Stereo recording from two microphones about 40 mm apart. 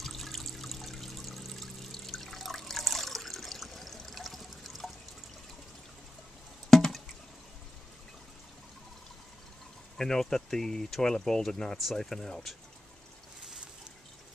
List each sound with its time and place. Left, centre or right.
0.0 s water: centre
6.7 s a sound: centre
9.9 s speech: centre
11.7 s speech: centre